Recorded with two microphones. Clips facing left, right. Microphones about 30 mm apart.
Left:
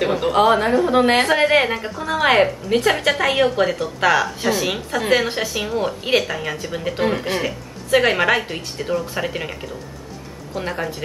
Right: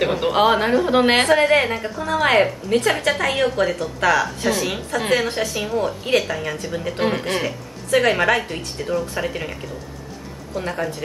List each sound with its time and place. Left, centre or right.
0.0 s a woman's voice: centre
1.3 s a woman's voice: centre
7.0 s speech: centre
7.4 s a woman's voice: centre